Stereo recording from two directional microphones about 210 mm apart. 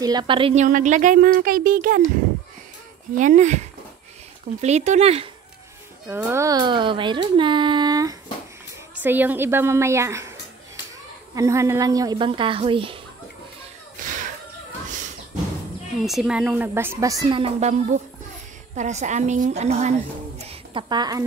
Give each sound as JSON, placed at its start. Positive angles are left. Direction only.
{"t": 0.0, "sound": "a child's voice", "side_deg": -20}
{"t": 0.7, "sound": "a woman's voice", "side_deg": -35}
{"t": 3.2, "sound": "a woman's voice", "side_deg": -35}
{"t": 6.0, "sound": "a child's voice", "side_deg": -10}
{"t": 11.3, "sound": "a child's voice", "side_deg": -15}
{"t": 14.0, "sound": "whip", "side_deg": -40}
{"t": 14.9, "sound": "a sound", "side_deg": -35}
{"t": 16.1, "sound": "a woman's voice", "side_deg": -5}